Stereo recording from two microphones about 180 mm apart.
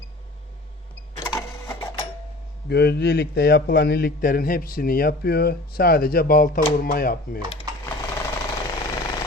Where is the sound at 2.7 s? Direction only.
65° left (ahead or behind).